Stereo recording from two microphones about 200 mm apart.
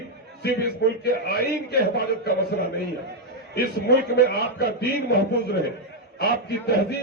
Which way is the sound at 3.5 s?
55° left (ahead or behind).